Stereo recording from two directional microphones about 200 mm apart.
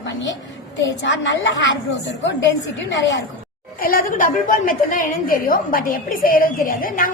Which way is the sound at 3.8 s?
45° left (ahead or behind).